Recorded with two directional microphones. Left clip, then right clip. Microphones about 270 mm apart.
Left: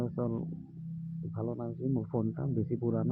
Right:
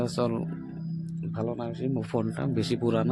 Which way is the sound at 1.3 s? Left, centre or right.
Centre.